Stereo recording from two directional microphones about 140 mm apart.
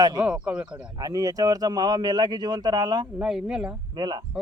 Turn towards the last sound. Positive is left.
turn(degrees=-30)  # may be behind; listen again after turning